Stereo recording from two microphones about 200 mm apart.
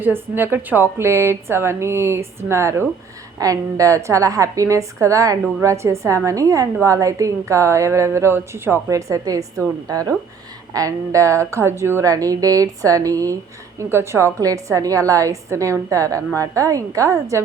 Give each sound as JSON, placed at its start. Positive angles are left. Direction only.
{"t": 0.0, "sound": "a woman's voice", "side_deg": -10}